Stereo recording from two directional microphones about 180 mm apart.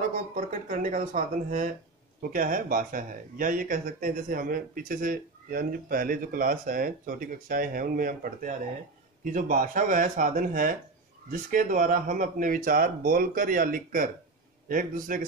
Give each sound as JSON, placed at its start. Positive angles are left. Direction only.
{"t": 0.3, "sound": "speech", "side_deg": -45}